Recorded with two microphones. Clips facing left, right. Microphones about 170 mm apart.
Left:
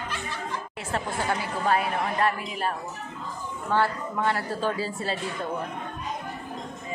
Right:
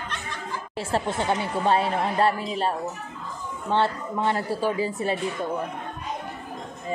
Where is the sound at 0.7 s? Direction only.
30° right (ahead or behind); by 4.9 s 15° right (ahead or behind).